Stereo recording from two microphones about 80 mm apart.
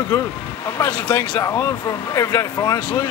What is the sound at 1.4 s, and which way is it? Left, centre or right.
Speech, left.